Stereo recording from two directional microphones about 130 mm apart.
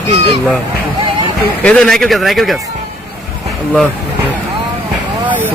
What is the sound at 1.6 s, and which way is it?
Speech, 5° left (ahead or behind).